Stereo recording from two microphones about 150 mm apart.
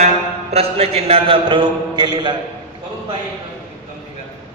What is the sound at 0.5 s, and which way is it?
A man's voice, 45° right (ahead or behind).